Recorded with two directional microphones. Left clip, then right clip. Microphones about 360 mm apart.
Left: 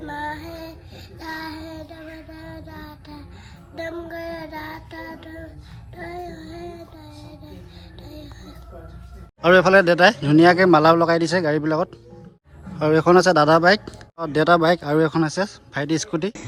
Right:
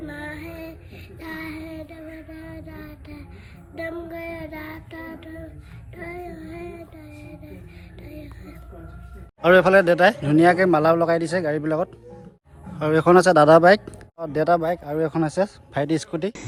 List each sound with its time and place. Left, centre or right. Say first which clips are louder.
0.1 s child singing: left 5 dB; left
1.5 s child singing: left 1 dB; centre
9.4 s speech: left 1 dB; centre